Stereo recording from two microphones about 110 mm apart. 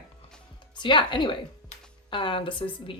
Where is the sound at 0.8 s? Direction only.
45° left (ahead or behind).